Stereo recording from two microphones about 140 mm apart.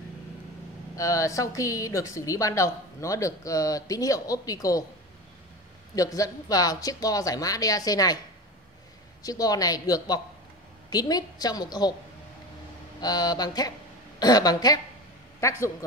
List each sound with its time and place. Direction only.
0.9 s a woman's voice: 25° left (ahead or behind)
5.9 s a woman's voice: 25° left (ahead or behind)
9.2 s a woman's voice: 25° left (ahead or behind)
13.0 s a woman's voice: 30° left (ahead or behind)